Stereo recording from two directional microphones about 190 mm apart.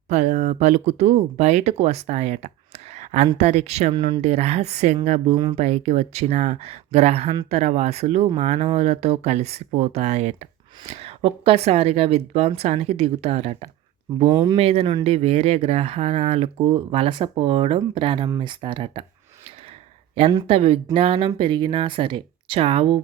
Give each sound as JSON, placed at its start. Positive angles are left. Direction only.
{"t": 0.1, "sound": "speech", "side_deg": -35}
{"t": 14.3, "sound": "speech", "side_deg": -15}
{"t": 14.5, "sound": "speech", "side_deg": -30}
{"t": 20.3, "sound": "speech", "side_deg": -30}